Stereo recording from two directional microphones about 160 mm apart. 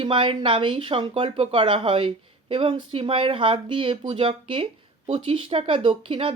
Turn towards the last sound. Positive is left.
turn(degrees=-35)  # may be behind; listen again after turning